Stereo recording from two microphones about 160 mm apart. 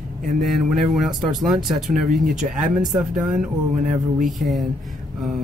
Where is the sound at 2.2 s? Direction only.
50° right (ahead or behind).